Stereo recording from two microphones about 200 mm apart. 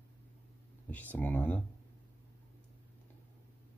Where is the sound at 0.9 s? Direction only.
10° left (ahead or behind).